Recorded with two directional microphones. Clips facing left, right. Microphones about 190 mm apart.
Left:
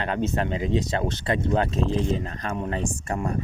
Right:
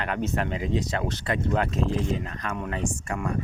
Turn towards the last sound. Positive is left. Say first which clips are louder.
# left 1 dB
turn(degrees=35)  # may be behind; listen again after turning